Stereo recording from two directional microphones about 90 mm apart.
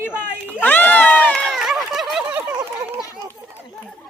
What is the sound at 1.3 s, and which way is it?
Run, 10° left (ahead or behind).